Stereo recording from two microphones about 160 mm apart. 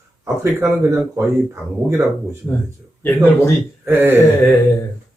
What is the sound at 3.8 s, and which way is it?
Speech, 15° right (ahead or behind).